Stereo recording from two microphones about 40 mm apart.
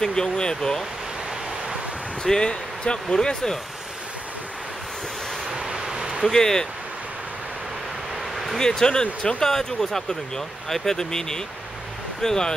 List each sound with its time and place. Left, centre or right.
0.0 s speech: centre
2.2 s speech: centre
5.5 s vehicle: centre
6.2 s speech: centre
8.5 s speech: centre